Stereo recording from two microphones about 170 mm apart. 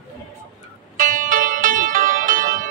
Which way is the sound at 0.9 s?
50° right (ahead or behind).